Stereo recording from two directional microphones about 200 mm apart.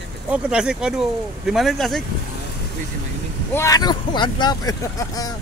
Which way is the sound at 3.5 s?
15° left (ahead or behind).